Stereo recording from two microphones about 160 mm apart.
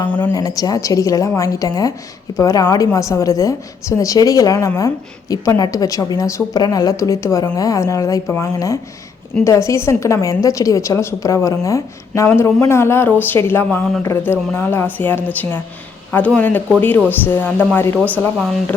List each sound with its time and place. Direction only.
0.0 s a woman's voice: 25° left (ahead or behind)